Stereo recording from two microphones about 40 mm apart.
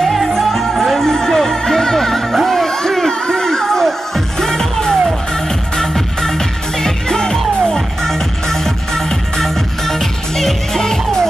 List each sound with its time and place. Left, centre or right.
0.0 s music: centre